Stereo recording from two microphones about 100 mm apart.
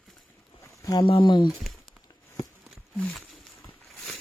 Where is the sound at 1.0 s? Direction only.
55° left (ahead or behind).